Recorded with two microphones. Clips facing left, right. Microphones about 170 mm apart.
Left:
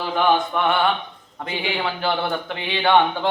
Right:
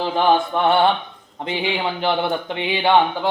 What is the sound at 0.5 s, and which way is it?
Speech, 30° right (ahead or behind).